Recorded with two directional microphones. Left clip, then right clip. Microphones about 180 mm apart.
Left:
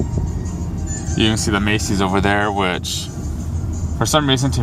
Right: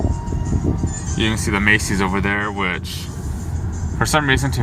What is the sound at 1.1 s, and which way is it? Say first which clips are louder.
Speech: left 3 dB; 20° left (ahead or behind).